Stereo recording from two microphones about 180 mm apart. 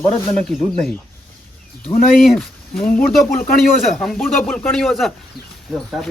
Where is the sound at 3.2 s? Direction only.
50° left (ahead or behind).